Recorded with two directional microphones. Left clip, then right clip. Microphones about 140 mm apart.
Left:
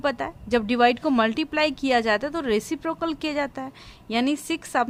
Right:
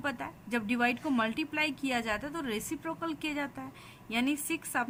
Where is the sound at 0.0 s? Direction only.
60° left (ahead or behind).